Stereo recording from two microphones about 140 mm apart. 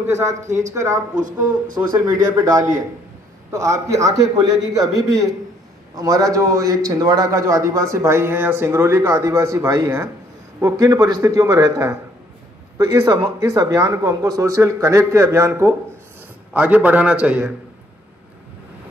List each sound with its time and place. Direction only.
0.0 s a man's voice: 20° right (ahead or behind)
0.5 s speech: 60° right (ahead or behind)
0.7 s a man's voice: 20° right (ahead or behind)
2.0 s a man's voice: 25° right (ahead or behind); by 17.6 s 10° right (ahead or behind)